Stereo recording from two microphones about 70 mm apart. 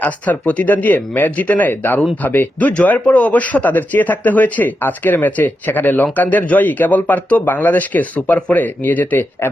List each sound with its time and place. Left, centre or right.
0.0 s speech: left